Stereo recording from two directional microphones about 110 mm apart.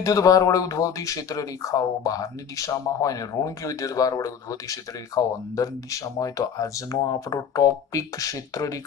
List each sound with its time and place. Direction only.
0.0 s speech: 30° left (ahead or behind)